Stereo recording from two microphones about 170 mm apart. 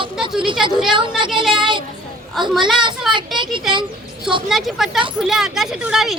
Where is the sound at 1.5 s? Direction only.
30° right (ahead or behind).